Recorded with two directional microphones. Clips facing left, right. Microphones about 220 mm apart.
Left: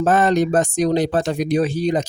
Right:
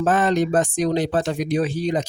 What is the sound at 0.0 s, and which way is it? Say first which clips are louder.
Speech: left 3 dB; 40° left (ahead or behind).